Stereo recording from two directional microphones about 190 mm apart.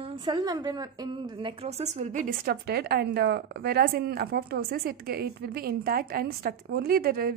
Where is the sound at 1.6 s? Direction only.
35° right (ahead or behind).